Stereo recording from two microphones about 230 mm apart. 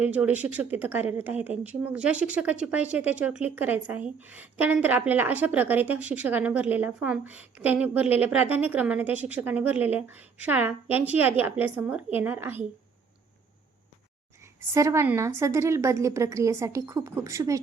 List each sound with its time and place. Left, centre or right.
0.0 s a woman's voice: centre
14.6 s a woman's voice: centre